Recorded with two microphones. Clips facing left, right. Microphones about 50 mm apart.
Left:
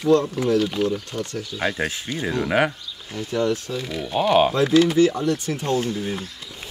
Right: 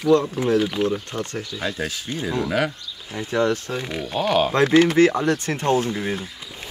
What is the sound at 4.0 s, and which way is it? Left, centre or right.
Speech, centre.